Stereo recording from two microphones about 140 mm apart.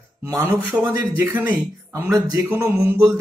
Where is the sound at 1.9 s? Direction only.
25° right (ahead or behind).